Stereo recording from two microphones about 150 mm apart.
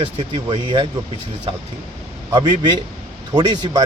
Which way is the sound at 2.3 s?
30° right (ahead or behind).